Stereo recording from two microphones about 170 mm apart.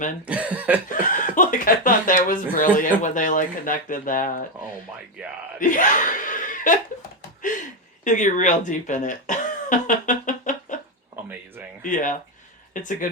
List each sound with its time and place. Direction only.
0.3 s cough: 10° right (ahead or behind)
0.9 s speech: 50° left (ahead or behind)
5.2 s speech: 5° right (ahead or behind)
5.5 s speech: 50° left (ahead or behind)
7.2 s a sound: 50° left (ahead or behind)
8.0 s speech: 45° left (ahead or behind)
11.8 s speech: 50° left (ahead or behind)